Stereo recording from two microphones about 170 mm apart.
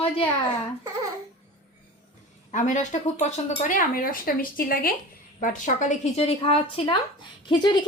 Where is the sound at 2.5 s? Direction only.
45° left (ahead or behind).